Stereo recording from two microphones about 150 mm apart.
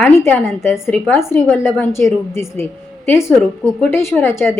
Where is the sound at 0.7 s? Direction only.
15° left (ahead or behind).